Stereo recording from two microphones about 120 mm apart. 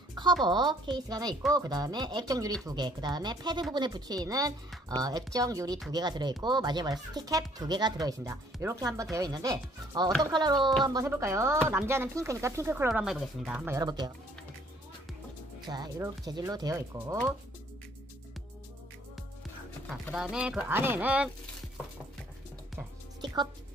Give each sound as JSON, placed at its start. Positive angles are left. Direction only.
{"t": 0.4, "sound": "speech", "side_deg": -40}
{"t": 11.1, "sound": "speech", "side_deg": -25}
{"t": 13.0, "sound": "speech", "side_deg": -5}
{"t": 13.7, "sound": "speech", "side_deg": -35}
{"t": 15.6, "sound": "speech", "side_deg": -35}
{"t": 19.9, "sound": "speech", "side_deg": 0}
{"t": 23.2, "sound": "music", "side_deg": -40}